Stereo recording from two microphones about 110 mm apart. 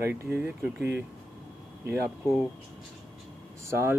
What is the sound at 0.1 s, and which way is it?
Speech, 20° right (ahead or behind).